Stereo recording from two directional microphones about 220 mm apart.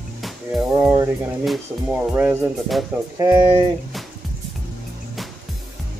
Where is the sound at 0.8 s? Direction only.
10° right (ahead or behind).